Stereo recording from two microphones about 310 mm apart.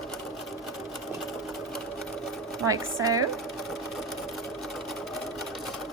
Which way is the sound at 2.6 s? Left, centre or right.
Centre.